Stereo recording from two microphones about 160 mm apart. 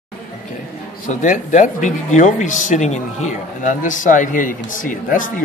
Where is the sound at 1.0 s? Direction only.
55° left (ahead or behind).